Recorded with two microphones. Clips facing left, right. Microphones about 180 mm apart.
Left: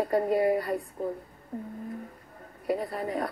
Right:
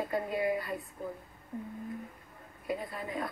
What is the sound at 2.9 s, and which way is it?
Speech, 40° left (ahead or behind).